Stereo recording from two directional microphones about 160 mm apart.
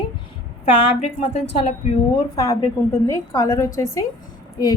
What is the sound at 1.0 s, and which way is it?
Speech, 35° left (ahead or behind).